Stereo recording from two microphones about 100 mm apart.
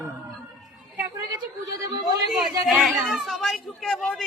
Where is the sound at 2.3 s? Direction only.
5° right (ahead or behind).